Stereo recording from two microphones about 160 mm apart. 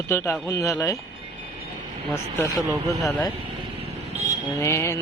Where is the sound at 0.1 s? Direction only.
15° left (ahead or behind).